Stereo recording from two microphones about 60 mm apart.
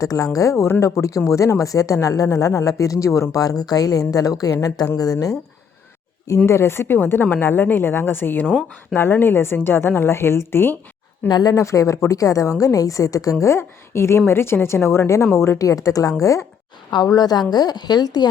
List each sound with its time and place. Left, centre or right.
0.0 s a woman's voice: left
6.4 s a woman's voice: left
11.3 s speech: left
12.0 s a woman's voice: left
13.4 s a woman's voice: left
15.5 s a woman's voice: left
17.0 s a woman's voice: left